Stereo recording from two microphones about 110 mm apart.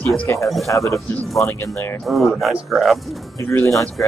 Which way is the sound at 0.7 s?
25° left (ahead or behind).